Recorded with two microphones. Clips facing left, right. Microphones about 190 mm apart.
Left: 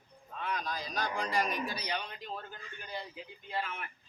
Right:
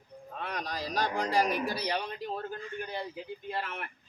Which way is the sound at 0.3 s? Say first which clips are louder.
Right 1 dB; 70° right (ahead or behind).